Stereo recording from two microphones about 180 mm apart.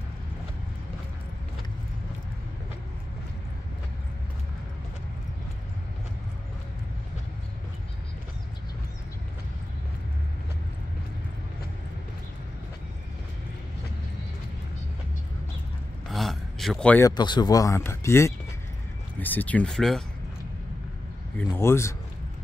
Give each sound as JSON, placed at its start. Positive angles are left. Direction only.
{"t": 16.1, "sound": "a sound", "side_deg": 0}
{"t": 17.2, "sound": "speech", "side_deg": 25}
{"t": 21.4, "sound": "speech", "side_deg": 15}